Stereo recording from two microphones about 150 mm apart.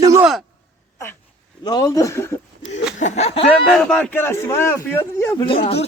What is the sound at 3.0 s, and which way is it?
Speech, 50° left (ahead or behind).